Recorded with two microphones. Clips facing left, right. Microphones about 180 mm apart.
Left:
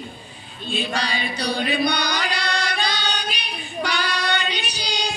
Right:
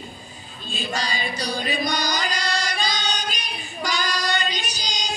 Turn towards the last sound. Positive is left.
turn(degrees=60)  # may be behind; listen again after turning